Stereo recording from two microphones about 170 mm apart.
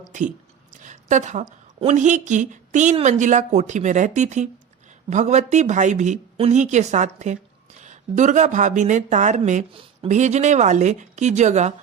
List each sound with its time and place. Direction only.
0.1 s a woman's voice: 45° right (ahead or behind)